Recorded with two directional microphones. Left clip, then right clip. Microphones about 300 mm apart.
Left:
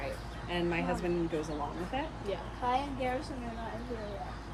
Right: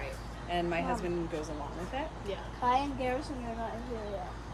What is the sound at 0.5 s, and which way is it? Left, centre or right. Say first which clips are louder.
A woman's voice: right 1 dB; centre.